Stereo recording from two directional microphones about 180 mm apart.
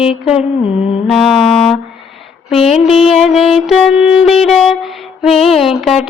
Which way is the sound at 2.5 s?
35° left (ahead or behind).